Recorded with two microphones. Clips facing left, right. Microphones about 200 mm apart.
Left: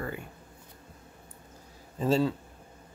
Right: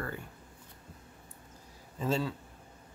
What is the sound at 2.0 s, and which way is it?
Speech, 35° left (ahead or behind).